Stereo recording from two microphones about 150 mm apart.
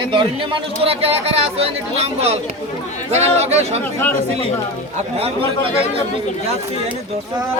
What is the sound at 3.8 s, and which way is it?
Speech, 10° left (ahead or behind).